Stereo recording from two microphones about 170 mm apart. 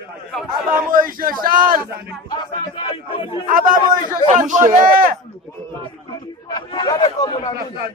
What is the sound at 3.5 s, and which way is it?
A man's voice, 55° right (ahead or behind).